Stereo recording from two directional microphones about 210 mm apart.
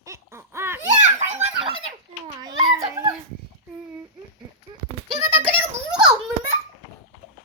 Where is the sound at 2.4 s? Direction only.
20° right (ahead or behind).